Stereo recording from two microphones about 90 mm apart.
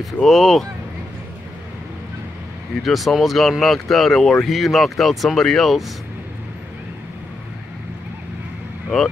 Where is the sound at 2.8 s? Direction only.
Centre (ahead or behind).